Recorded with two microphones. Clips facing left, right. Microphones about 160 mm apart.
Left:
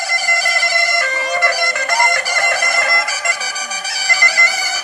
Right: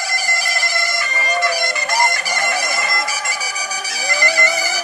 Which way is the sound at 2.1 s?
60° left (ahead or behind).